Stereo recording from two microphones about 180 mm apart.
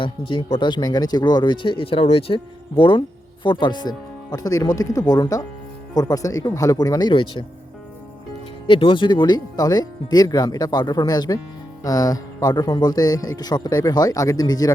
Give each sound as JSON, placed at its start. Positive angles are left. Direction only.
{"t": 0.0, "sound": "speech", "side_deg": 25}
{"t": 8.6, "sound": "speech", "side_deg": 30}